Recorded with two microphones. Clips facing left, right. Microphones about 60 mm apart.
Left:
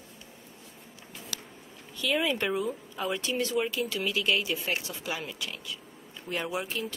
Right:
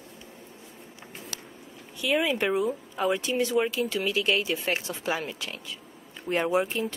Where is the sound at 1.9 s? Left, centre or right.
Centre.